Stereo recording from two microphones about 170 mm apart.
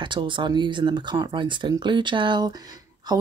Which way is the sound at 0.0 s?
30° right (ahead or behind).